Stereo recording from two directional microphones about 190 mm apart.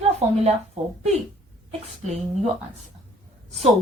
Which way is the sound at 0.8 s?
35° right (ahead or behind).